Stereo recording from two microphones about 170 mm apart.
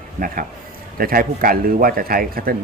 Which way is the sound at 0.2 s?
55° right (ahead or behind).